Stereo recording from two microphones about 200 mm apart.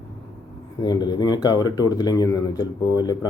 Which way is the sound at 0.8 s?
20° left (ahead or behind).